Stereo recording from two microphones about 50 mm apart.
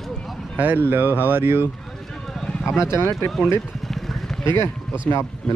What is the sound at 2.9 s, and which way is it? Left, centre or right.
Speech, left.